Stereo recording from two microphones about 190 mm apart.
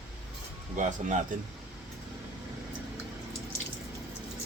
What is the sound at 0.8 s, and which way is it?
Speech, 40° right (ahead or behind).